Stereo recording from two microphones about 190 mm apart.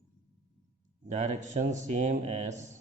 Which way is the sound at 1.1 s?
40° right (ahead or behind).